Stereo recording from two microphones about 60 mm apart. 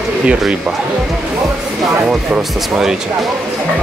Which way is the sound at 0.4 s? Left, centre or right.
Centre.